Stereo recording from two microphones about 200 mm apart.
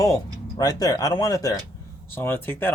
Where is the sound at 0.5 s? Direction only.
20° left (ahead or behind).